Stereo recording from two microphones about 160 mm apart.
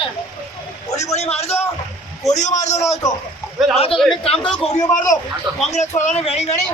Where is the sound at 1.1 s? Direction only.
40° left (ahead or behind).